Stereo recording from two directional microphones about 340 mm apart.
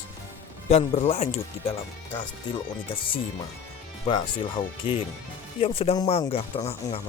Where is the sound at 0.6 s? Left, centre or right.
Centre.